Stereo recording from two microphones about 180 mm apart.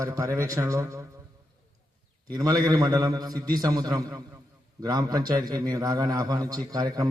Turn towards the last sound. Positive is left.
turn(degrees=-20)  # may be behind; listen again after turning